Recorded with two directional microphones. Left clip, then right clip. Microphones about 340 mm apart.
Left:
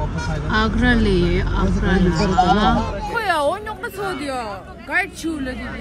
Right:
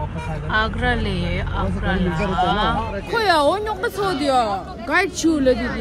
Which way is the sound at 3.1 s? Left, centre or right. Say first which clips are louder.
Right 3 dB; centre.